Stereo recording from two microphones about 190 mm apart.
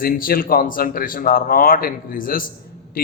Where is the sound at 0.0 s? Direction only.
50° left (ahead or behind).